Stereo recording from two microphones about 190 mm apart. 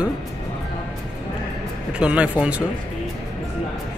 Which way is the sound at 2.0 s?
5° right (ahead or behind).